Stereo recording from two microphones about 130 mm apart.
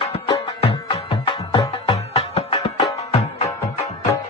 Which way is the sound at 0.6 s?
45° left (ahead or behind).